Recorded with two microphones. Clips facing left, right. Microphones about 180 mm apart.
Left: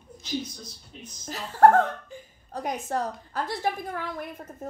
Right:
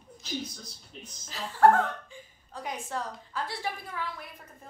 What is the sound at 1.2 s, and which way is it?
A woman's voice, 45° left (ahead or behind).